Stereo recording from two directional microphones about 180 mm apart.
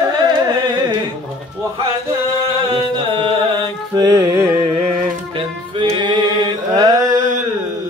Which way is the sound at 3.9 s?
20° right (ahead or behind).